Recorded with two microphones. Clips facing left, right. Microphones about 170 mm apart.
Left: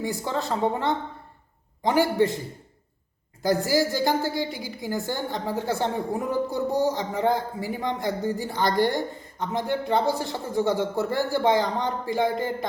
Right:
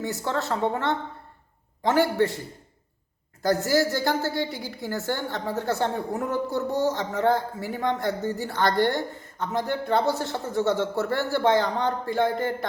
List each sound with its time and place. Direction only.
0.0 s a woman's voice: 15° left (ahead or behind)
3.7 s a woman's voice: 15° left (ahead or behind)